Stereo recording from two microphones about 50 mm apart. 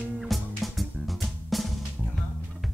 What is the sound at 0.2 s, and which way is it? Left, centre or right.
Music, centre.